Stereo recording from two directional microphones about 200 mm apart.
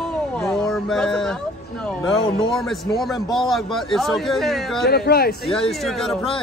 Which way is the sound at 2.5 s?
Centre (ahead or behind).